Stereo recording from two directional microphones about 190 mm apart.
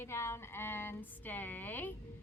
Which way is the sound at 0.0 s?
15° left (ahead or behind).